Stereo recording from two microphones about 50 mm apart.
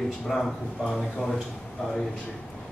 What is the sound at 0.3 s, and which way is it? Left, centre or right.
Speech, centre.